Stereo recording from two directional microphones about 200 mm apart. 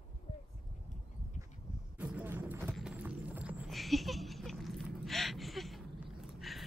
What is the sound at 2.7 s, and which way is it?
Clip-clop, 5° right (ahead or behind).